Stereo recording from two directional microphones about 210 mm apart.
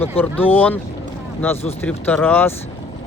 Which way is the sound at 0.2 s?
10° left (ahead or behind).